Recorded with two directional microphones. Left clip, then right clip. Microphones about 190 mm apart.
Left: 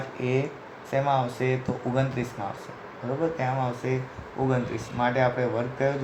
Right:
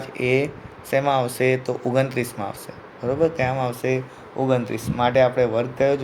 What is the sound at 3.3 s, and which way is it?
Speech, 60° right (ahead or behind).